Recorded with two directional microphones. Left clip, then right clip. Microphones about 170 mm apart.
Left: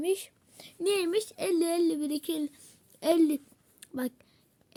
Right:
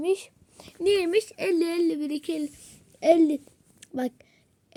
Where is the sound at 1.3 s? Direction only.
15° right (ahead or behind).